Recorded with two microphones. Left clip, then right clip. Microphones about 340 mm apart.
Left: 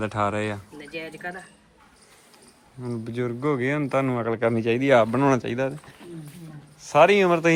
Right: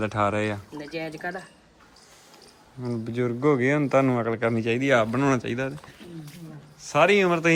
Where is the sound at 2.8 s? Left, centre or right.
Centre.